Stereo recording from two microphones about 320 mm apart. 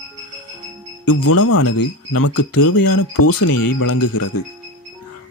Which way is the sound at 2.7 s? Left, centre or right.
Left.